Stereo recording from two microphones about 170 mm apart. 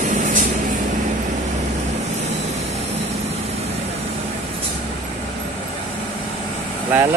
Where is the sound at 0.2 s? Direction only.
50° right (ahead or behind).